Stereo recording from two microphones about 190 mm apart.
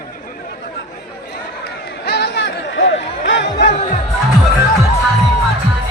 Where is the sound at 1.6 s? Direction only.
60° left (ahead or behind).